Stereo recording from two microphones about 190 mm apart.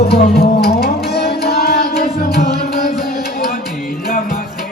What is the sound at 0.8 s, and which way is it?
Tabla, 55° left (ahead or behind).